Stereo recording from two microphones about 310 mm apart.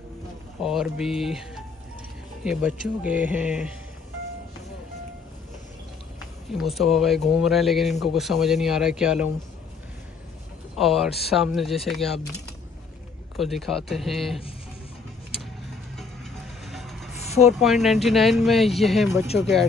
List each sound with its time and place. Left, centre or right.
0.6 s speech: centre
6.5 s speech: centre
10.8 s speech: centre
13.4 s speech: centre
16.0 s vehicle: centre
17.1 s vehicle: left
17.6 s speech: centre